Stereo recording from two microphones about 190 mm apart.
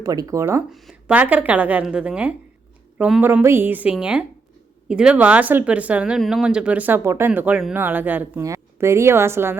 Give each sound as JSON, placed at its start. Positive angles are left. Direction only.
{"t": 0.0, "sound": "speech", "side_deg": -20}
{"t": 0.7, "sound": "speech", "side_deg": 0}